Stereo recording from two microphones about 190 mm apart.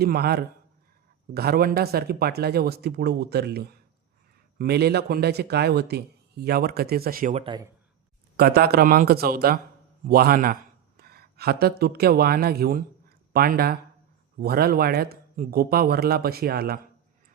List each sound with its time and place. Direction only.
0.0 s speech: 55° right (ahead or behind)
7.4 s speech: 25° right (ahead or behind)
8.4 s speech: 55° right (ahead or behind)